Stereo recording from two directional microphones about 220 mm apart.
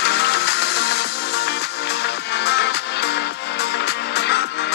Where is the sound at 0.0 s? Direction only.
50° left (ahead or behind).